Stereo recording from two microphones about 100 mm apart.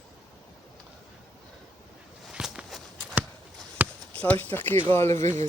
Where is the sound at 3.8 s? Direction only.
15° right (ahead or behind).